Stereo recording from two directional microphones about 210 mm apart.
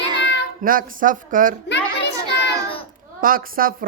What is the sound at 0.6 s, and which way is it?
Speech, 40° right (ahead or behind).